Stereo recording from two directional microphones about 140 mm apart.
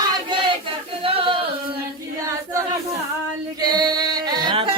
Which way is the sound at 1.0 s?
40° right (ahead or behind).